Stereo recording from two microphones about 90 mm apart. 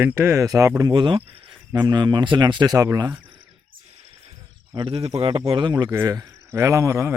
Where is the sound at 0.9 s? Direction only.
70° right (ahead or behind).